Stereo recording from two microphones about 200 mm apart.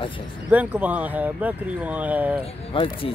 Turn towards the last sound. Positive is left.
turn(degrees=25)  # may be behind; listen again after turning